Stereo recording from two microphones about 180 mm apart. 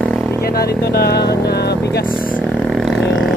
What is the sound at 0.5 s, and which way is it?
Speech, 60° left (ahead or behind).